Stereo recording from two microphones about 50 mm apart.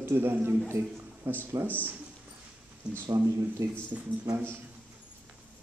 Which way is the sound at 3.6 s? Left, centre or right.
Right.